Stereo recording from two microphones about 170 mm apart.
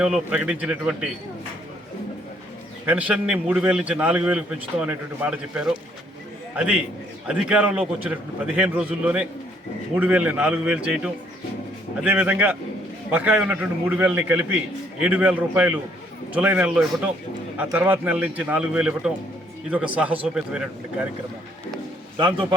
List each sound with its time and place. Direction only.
0.0 s a man's voice: 5° right (ahead or behind)
2.8 s a man's voice: 10° right (ahead or behind)
22.2 s a man's voice: 30° right (ahead or behind)